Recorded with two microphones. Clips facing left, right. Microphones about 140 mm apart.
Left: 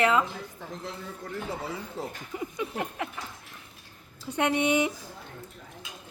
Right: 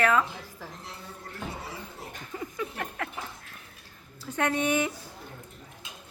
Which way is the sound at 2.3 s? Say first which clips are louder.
Even; 15° left (ahead or behind).